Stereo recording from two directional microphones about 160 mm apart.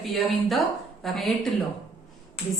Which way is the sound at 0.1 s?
Centre (ahead or behind).